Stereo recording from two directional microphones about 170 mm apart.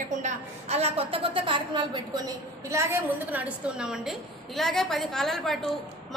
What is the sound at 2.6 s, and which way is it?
A woman's voice, 15° right (ahead or behind).